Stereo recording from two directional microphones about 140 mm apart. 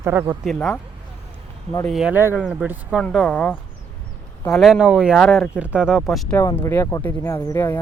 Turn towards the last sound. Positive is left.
turn(degrees=15)  # may be behind; listen again after turning